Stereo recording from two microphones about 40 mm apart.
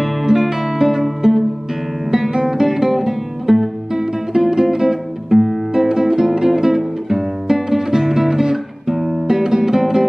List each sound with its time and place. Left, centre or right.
0.0 s music: centre